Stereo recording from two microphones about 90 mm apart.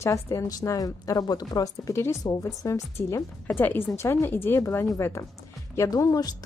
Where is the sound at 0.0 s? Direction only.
35° left (ahead or behind).